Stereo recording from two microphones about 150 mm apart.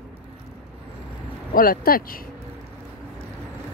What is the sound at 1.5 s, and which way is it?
Speech, 75° left (ahead or behind).